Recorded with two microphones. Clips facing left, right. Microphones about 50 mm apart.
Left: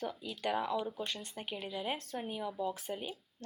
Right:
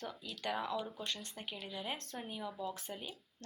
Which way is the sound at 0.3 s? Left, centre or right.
Centre.